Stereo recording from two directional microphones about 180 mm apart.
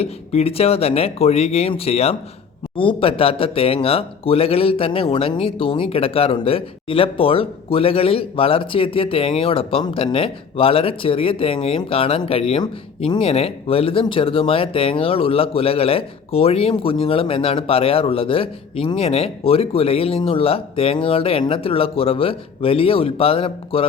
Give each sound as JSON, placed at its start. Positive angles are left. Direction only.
{"t": 0.0, "sound": "speech", "side_deg": 35}